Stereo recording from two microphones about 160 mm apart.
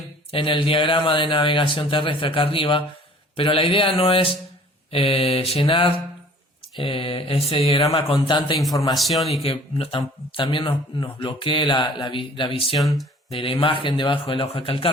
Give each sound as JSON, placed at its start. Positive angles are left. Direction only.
{"t": 0.3, "sound": "speech", "side_deg": 30}
{"t": 7.7, "sound": "speech", "side_deg": 20}
{"t": 7.9, "sound": "speech", "side_deg": 35}
{"t": 9.0, "sound": "speech", "side_deg": 0}
{"t": 9.4, "sound": "speech", "side_deg": 35}
{"t": 12.8, "sound": "speech", "side_deg": 0}
{"t": 13.3, "sound": "speech", "side_deg": 35}